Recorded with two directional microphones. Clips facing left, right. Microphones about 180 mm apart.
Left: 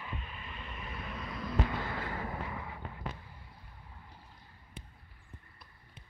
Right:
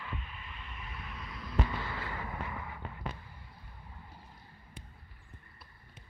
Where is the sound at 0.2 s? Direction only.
35° left (ahead or behind).